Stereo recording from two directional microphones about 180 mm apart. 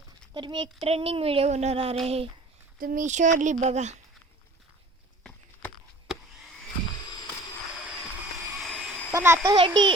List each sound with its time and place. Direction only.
0.3 s speech: 25° right (ahead or behind)
2.7 s speech: 50° right (ahead or behind)
5.2 s a sound: 5° left (ahead or behind)
9.1 s a child's voice: 15° right (ahead or behind)
9.6 s a child's voice: 25° right (ahead or behind)